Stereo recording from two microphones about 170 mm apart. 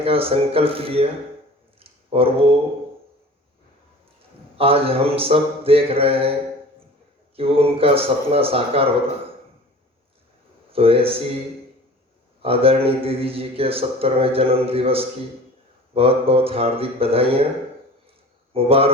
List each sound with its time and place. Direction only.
0.0 s a man's voice: 35° right (ahead or behind)
1.8 s a sound: 35° right (ahead or behind)
4.5 s a man's voice: 35° right (ahead or behind)
7.3 s a man's voice: 35° right (ahead or behind)
10.7 s a man's voice: 35° right (ahead or behind)
12.4 s a man's voice: 35° right (ahead or behind)
18.5 s a man's voice: 35° right (ahead or behind)